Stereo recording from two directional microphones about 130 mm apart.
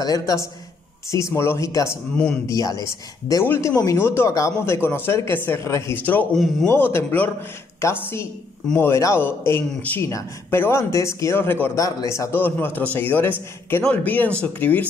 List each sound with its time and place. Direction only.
0.0 s a man's voice: 25° left (ahead or behind)
6.3 s a man's voice: centre (ahead or behind)
6.7 s a man's voice: 20° left (ahead or behind)